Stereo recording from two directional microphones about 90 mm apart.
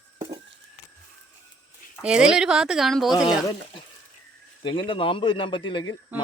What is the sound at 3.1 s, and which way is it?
Speech, 50° left (ahead or behind).